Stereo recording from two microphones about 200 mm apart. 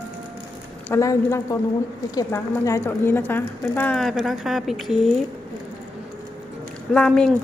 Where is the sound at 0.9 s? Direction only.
15° left (ahead or behind); by 5.1 s centre (ahead or behind).